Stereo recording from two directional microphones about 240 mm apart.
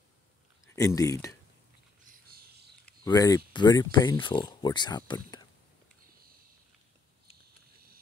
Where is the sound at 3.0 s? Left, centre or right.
Centre.